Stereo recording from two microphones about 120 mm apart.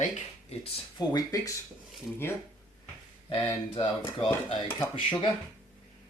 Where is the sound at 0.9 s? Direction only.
30° left (ahead or behind).